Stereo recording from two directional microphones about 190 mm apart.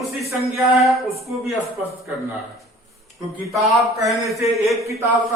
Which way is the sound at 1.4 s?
15° right (ahead or behind).